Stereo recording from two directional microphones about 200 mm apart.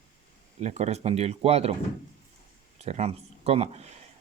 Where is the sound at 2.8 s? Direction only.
30° right (ahead or behind).